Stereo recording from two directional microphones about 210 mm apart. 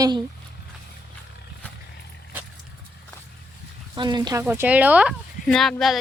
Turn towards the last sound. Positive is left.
turn(degrees=0)  # may be behind; listen again after turning